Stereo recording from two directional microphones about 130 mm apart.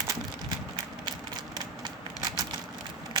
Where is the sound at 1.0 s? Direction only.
35° right (ahead or behind).